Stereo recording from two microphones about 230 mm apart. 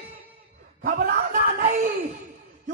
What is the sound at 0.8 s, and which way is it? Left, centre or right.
Speech, right.